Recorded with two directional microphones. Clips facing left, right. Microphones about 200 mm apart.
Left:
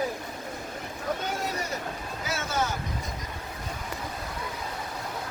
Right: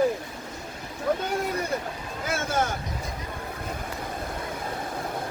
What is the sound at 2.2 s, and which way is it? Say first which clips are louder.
Boat: right 3 dB; 50° right (ahead or behind).